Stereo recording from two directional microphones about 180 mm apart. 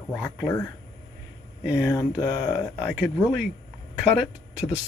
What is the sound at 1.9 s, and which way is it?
Speech, 20° left (ahead or behind).